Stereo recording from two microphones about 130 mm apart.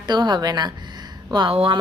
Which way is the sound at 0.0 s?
35° right (ahead or behind).